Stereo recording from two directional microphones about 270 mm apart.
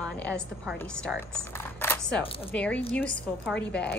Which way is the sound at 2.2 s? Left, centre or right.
Left.